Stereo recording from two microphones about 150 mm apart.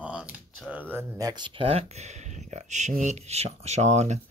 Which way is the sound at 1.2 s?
30° right (ahead or behind).